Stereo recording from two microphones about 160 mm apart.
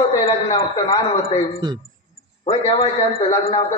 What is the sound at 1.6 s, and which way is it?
Speech, 25° right (ahead or behind).